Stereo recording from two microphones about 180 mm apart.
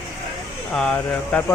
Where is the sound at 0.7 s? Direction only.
5° left (ahead or behind).